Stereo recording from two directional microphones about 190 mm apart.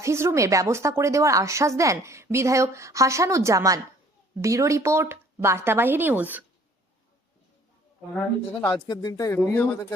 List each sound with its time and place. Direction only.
0.0 s a woman's voice: 15° right (ahead or behind)
8.6 s speech: 20° left (ahead or behind)